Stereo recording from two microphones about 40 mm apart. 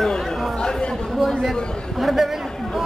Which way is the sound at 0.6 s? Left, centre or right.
Centre.